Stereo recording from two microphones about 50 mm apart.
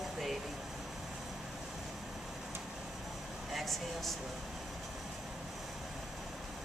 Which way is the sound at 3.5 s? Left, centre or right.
Centre.